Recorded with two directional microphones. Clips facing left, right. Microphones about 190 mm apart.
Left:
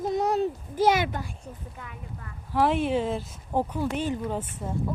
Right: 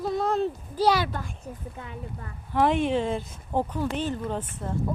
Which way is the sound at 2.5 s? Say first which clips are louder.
Right 1 dB; centre (ahead or behind).